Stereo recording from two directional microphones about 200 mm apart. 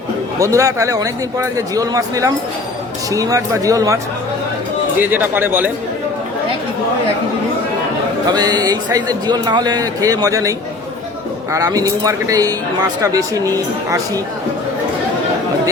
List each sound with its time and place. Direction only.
0.3 s speech: 15° right (ahead or behind)
8.3 s a man's voice: 20° right (ahead or behind)
11.5 s speech: 15° right (ahead or behind)